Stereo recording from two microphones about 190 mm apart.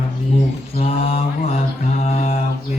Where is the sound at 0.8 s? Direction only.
30° left (ahead or behind).